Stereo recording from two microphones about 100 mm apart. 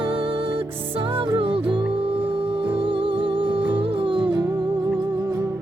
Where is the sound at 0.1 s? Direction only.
60° right (ahead or behind).